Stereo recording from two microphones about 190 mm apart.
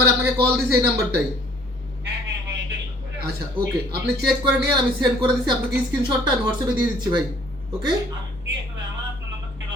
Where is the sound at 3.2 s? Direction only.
55° right (ahead or behind).